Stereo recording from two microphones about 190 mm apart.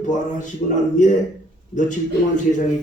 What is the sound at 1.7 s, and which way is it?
Speech, 40° left (ahead or behind).